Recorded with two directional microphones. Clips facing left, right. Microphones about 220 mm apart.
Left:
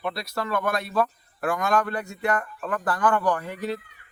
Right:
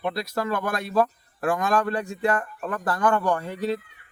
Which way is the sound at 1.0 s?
30° right (ahead or behind).